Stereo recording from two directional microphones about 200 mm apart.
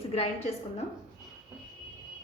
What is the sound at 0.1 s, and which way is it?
Speech, 30° left (ahead or behind).